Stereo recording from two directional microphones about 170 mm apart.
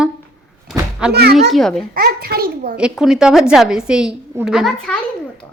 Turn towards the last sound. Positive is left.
turn(degrees=0)  # may be behind; listen again after turning